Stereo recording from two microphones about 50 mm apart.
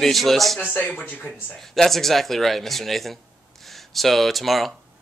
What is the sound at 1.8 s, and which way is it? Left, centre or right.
A man's voice, centre.